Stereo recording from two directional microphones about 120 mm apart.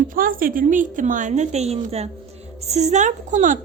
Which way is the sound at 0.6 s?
90° right.